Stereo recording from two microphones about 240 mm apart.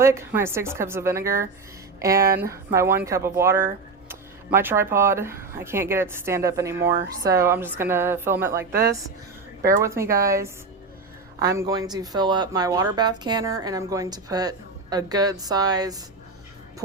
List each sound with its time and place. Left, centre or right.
0.0 s speech: centre
9.6 s speech: centre